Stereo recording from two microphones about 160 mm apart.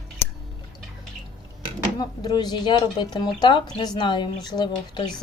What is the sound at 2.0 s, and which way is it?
A woman's voice, 25° left (ahead or behind).